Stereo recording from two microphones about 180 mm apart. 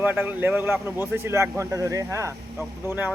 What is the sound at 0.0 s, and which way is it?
A man's voice, 10° right (ahead or behind).